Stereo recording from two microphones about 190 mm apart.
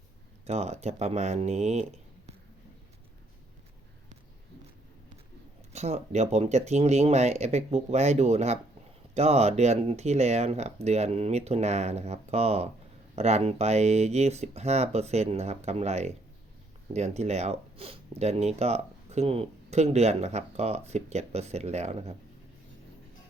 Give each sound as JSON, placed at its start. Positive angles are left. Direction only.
{"t": 0.4, "sound": "speech", "side_deg": -35}
{"t": 5.7, "sound": "speech", "side_deg": -35}